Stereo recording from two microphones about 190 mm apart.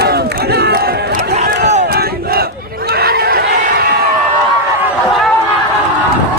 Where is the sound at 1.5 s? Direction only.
65° right (ahead or behind).